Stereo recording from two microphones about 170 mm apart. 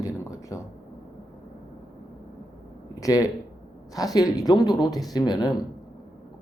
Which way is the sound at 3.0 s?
20° left (ahead or behind).